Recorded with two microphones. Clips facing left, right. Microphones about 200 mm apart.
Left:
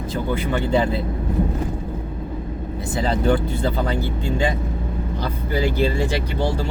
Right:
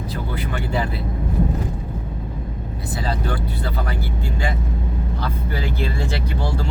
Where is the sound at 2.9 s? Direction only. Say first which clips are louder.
Left 7 dB; 25° left (ahead or behind).